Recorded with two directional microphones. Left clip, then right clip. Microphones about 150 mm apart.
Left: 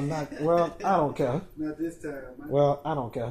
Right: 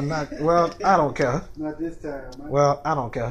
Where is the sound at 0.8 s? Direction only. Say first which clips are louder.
Right 6 dB; 5° right (ahead or behind).